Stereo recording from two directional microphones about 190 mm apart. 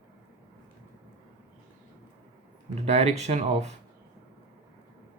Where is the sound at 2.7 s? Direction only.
35° right (ahead or behind).